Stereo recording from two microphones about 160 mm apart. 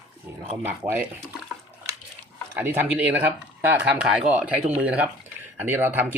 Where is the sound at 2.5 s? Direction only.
15° right (ahead or behind).